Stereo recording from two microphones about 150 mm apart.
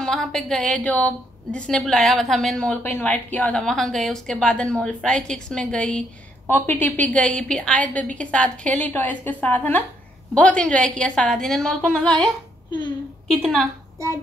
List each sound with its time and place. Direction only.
0.0 s a woman's voice: 5° left (ahead or behind)
13.3 s a woman's voice: 5° left (ahead or behind)
13.9 s speech: 20° right (ahead or behind)